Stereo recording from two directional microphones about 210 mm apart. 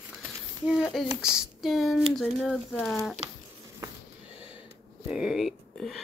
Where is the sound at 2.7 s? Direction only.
10° left (ahead or behind).